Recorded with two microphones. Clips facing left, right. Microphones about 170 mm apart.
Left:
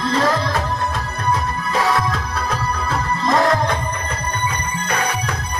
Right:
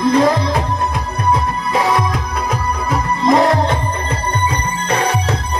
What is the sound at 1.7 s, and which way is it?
Music, 20° right (ahead or behind).